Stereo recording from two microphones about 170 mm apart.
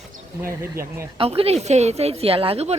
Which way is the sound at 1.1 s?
35° right (ahead or behind).